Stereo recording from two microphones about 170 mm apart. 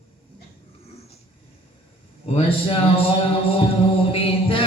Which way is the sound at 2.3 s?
35° left (ahead or behind).